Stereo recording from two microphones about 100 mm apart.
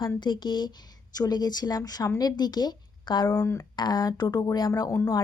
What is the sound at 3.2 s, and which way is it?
Speech, 25° left (ahead or behind).